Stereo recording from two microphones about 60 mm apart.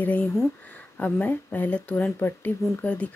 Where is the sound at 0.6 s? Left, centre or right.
Left.